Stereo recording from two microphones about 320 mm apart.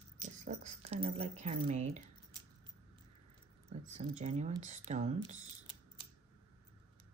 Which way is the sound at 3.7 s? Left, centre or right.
Right.